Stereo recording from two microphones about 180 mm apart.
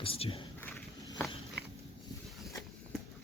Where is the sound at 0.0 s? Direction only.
30° left (ahead or behind).